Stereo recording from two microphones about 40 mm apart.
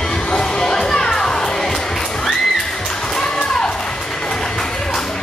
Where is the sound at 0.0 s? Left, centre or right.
Centre.